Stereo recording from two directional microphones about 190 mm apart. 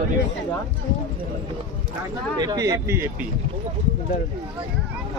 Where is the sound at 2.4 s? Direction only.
20° right (ahead or behind).